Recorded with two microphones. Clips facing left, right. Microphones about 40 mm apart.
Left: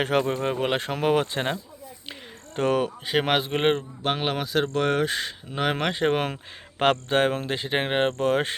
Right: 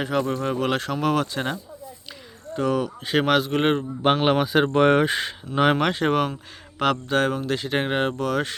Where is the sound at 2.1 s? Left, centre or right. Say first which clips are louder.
Right 2 dB; left.